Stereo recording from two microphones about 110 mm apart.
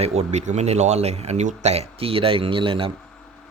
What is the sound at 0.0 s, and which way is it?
Speech, 80° right.